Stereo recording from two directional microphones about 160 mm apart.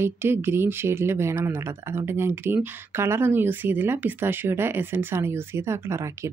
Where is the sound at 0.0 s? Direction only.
15° right (ahead or behind).